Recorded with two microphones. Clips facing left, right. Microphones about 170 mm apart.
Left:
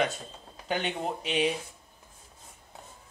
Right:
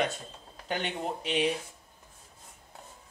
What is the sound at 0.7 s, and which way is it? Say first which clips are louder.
Speech: left 2 dB; 10° left (ahead or behind).